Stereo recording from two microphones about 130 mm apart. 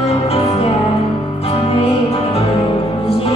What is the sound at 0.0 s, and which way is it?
Music, 50° left (ahead or behind).